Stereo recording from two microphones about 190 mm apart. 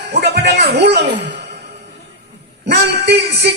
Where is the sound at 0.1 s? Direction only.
60° right (ahead or behind).